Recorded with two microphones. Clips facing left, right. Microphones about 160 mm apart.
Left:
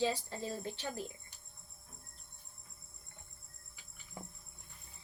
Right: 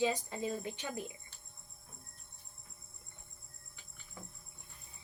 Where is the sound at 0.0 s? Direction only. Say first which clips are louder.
Right 2 dB; 15° right (ahead or behind).